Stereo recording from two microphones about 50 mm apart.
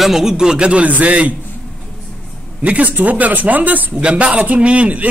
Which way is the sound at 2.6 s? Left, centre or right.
Right.